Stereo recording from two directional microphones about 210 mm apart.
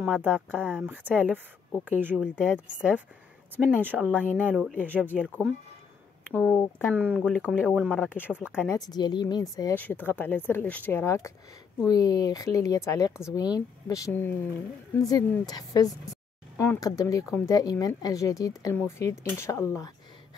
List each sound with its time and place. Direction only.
0.0 s speech: 5° right (ahead or behind)
4.9 s speech: 10° right (ahead or behind)
6.3 s speech: 10° left (ahead or behind); by 8.6 s 5° right (ahead or behind)
8.6 s speech: 15° left (ahead or behind)